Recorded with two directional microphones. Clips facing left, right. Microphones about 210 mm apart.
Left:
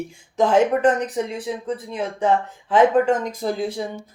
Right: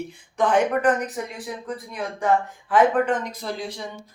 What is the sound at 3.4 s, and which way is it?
Speech, 50° left (ahead or behind).